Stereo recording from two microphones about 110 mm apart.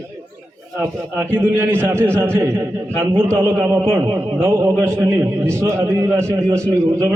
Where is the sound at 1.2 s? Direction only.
20° right (ahead or behind).